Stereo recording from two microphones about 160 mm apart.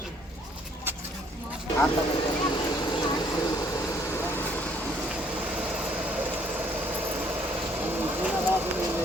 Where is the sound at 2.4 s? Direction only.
30° left (ahead or behind); by 4.8 s 10° left (ahead or behind).